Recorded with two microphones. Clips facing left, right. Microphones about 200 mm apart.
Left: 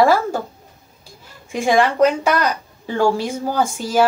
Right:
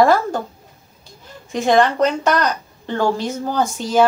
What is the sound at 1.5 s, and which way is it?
A woman's voice, 10° left (ahead or behind).